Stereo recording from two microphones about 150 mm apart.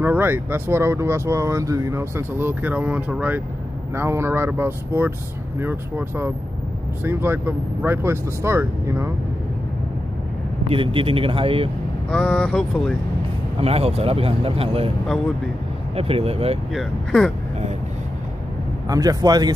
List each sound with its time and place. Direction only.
0.0 s speech: 15° right (ahead or behind)
10.7 s speech: 35° right (ahead or behind)
12.1 s speech: 5° left (ahead or behind)
13.6 s speech: 40° right (ahead or behind)
16.0 s speech: 40° right (ahead or behind)
16.7 s speech: centre (ahead or behind)
18.9 s speech: 25° right (ahead or behind)